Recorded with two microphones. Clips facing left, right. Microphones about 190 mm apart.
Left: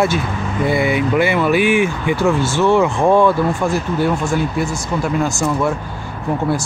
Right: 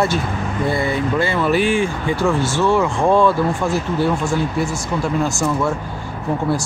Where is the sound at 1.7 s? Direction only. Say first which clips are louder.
Left 2 dB; 20° left (ahead or behind).